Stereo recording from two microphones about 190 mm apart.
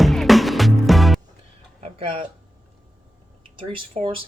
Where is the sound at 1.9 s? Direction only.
30° right (ahead or behind).